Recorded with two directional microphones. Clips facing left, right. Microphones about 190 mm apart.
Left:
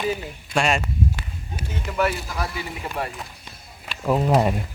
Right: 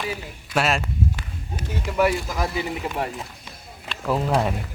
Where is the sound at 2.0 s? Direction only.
15° right (ahead or behind).